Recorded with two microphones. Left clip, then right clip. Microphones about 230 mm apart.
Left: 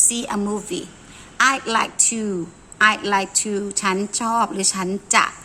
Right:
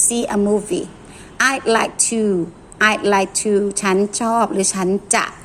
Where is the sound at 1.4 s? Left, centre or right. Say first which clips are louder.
Right 2 dB; centre.